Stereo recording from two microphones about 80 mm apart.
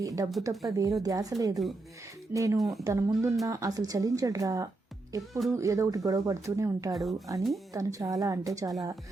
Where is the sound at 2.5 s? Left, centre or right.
Centre.